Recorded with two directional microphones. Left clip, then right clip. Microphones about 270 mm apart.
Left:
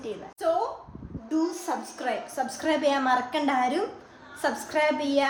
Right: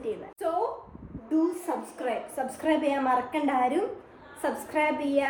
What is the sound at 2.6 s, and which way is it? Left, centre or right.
Speech, left.